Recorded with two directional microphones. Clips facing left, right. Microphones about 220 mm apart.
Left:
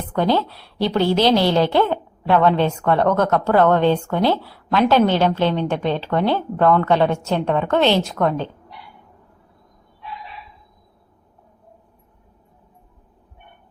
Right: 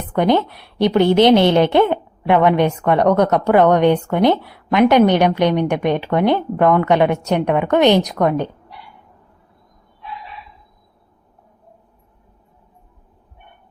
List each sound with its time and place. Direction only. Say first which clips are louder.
0.0 s a woman's voice: right 3 dB; 20° right (ahead or behind)